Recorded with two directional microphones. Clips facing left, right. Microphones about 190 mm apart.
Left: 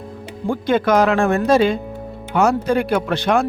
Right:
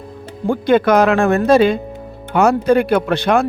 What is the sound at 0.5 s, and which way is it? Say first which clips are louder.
Speech: right 3 dB; 60° right (ahead or behind).